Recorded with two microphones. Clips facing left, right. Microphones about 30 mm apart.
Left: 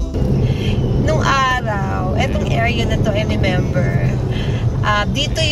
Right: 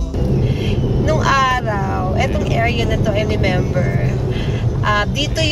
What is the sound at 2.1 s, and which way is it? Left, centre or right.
Speech, centre.